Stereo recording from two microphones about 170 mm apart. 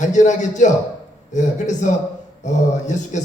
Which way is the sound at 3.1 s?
45° left (ahead or behind).